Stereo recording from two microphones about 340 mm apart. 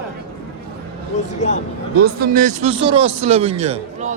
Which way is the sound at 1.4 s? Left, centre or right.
Centre.